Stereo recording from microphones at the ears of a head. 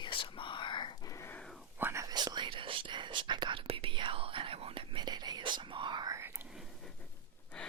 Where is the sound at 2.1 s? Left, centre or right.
Right.